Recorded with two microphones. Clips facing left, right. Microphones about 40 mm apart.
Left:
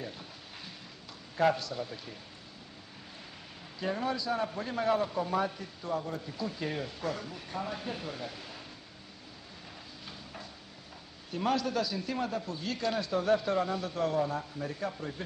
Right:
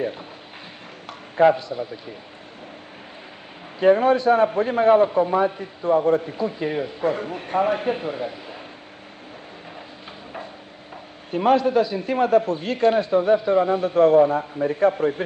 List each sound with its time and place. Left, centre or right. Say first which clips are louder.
1.3 s a man's voice: right 11 dB; right
3.8 s a man's voice: right 17 dB; right
11.2 s a man's voice: right 12 dB; right